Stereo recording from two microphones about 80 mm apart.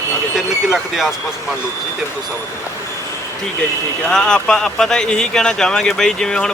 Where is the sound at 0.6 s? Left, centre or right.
Centre.